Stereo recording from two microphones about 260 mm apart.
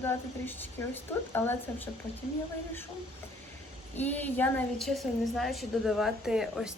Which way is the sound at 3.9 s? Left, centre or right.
Centre.